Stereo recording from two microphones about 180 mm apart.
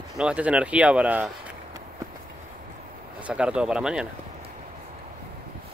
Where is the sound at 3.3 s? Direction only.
5° right (ahead or behind).